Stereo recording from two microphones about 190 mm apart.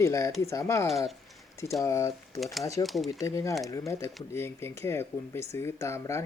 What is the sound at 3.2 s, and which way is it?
Speech, 15° left (ahead or behind).